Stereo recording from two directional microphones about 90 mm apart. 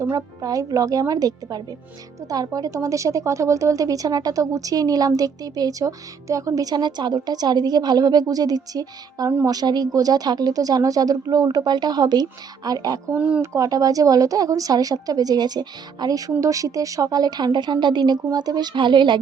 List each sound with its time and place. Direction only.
0.0 s a woman's voice: 40° right (ahead or behind)
13.1 s speech: 15° right (ahead or behind)
13.4 s a woman's voice: 35° right (ahead or behind); by 19.2 s 60° right (ahead or behind)